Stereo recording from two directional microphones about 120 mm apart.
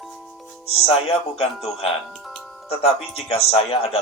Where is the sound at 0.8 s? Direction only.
55° left (ahead or behind).